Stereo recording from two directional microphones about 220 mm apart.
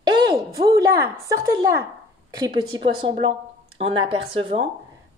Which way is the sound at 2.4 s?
25° right (ahead or behind).